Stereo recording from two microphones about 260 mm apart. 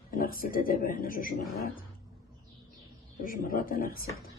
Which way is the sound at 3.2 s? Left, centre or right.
Left.